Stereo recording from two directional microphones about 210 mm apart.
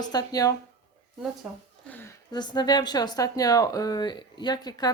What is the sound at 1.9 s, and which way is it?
Speech, 10° left (ahead or behind).